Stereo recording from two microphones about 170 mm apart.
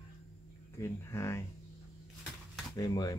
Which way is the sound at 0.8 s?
15° left (ahead or behind).